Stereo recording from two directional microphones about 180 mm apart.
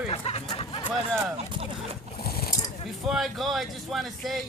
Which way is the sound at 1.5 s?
30° right (ahead or behind).